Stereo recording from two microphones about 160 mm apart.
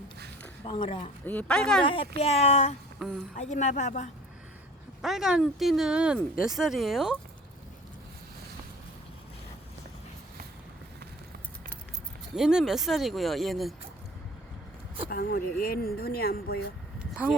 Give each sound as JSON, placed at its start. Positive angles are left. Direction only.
{"t": 0.6, "sound": "speech", "side_deg": 35}
{"t": 1.2, "sound": "speech", "side_deg": 10}
{"t": 1.8, "sound": "a woman's voice", "side_deg": 35}
{"t": 5.0, "sound": "speech", "side_deg": 0}
{"t": 12.4, "sound": "speech", "side_deg": -5}
{"t": 15.1, "sound": "speech", "side_deg": 70}
{"t": 17.0, "sound": "a sound", "side_deg": -5}